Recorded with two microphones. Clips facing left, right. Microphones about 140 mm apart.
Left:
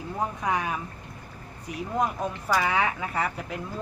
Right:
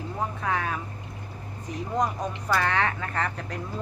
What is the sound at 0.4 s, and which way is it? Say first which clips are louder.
A woman's voice: even; 15° left (ahead or behind).